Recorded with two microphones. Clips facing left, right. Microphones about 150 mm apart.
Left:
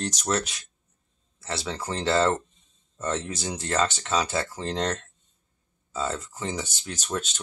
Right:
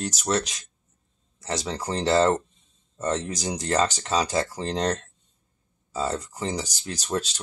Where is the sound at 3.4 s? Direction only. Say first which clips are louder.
Right 3 dB; 15° right (ahead or behind).